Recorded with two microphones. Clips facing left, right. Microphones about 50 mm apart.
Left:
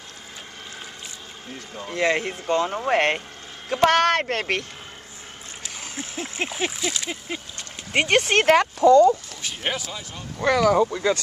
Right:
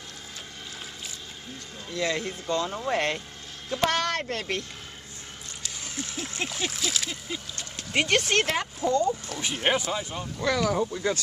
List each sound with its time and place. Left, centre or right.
1.8 s speech: left
3.9 s speech: left
5.6 s speech: left
6.7 s a sound: centre
8.0 s speech: left
8.5 s speech: left
9.3 s speech: centre
10.4 s speech: left